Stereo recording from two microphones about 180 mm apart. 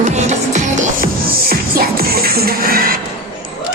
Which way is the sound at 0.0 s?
40° right (ahead or behind).